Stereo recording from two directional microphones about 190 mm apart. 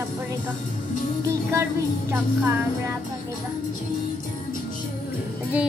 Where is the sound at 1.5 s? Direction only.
15° right (ahead or behind).